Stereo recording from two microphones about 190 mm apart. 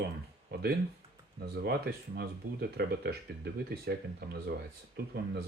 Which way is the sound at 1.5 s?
55° right (ahead or behind).